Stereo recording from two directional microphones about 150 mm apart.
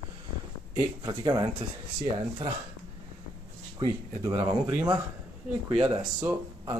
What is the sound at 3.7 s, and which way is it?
Speech, 35° right (ahead or behind).